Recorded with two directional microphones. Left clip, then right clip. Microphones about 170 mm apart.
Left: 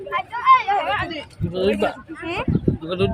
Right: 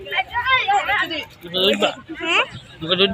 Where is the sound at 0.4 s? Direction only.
65° left (ahead or behind).